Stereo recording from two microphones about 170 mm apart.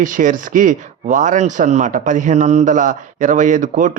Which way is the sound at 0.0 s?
50° right (ahead or behind).